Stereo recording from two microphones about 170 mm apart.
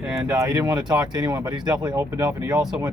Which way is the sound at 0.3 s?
20° right (ahead or behind).